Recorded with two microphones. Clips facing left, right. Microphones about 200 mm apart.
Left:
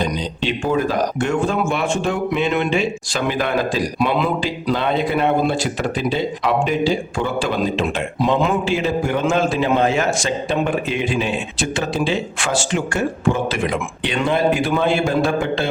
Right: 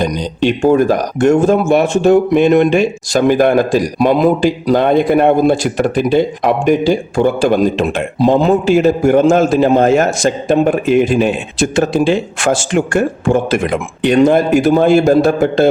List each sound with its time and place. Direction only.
0.0 s a man's voice: 45° right (ahead or behind)
8.2 s a man's voice: 35° right (ahead or behind)